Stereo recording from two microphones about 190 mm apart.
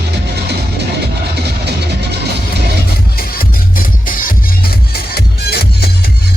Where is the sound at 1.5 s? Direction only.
60° right (ahead or behind).